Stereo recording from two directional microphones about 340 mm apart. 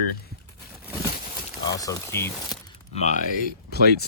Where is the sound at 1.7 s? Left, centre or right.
Centre.